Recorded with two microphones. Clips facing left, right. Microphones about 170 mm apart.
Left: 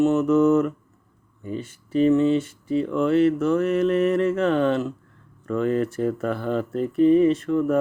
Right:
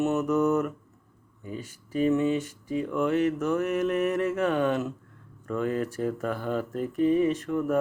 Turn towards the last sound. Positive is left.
turn(degrees=-10)  # may be behind; listen again after turning